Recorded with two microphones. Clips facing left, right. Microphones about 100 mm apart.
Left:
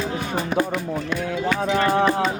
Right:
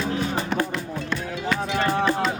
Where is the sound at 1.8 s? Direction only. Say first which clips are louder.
Left 4 dB; 60° left (ahead or behind).